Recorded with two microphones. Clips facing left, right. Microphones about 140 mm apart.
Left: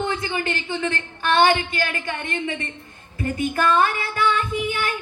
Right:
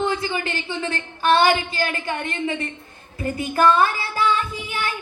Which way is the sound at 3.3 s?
30° right (ahead or behind).